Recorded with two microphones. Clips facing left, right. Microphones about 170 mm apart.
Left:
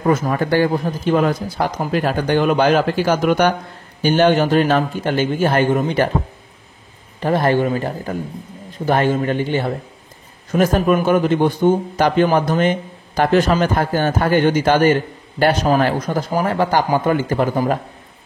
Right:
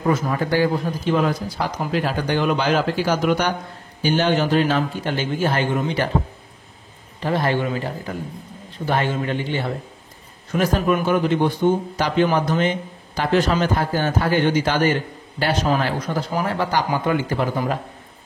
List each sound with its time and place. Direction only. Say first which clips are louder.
0.1 s a man's voice: left 4 dB; 55° left (ahead or behind)
7.2 s a man's voice: left 5 dB; 50° left (ahead or behind)